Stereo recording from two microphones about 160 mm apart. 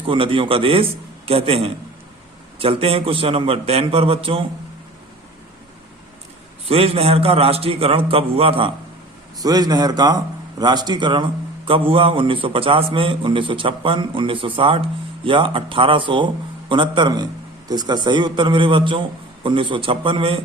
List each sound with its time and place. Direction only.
0.1 s a man's voice: 35° right (ahead or behind)
6.7 s a man's voice: 40° right (ahead or behind)
9.4 s a man's voice: 25° right (ahead or behind)